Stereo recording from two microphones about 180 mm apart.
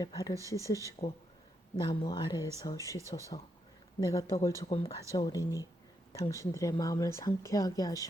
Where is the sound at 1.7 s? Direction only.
25° left (ahead or behind).